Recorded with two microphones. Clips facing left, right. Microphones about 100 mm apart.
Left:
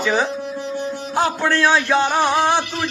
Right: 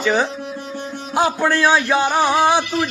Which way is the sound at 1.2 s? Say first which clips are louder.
Right 2 dB; 5° right (ahead or behind).